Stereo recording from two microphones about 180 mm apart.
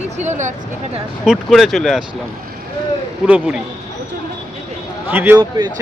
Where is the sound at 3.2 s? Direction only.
5° right (ahead or behind).